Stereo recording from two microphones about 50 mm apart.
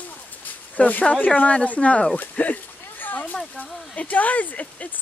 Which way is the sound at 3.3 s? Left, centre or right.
Left.